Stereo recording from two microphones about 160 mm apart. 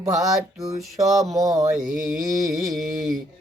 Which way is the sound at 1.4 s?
20° right (ahead or behind).